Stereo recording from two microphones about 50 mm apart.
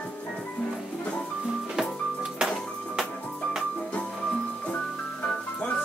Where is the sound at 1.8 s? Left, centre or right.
Centre.